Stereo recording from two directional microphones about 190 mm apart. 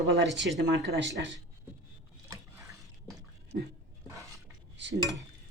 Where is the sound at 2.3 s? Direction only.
15° right (ahead or behind).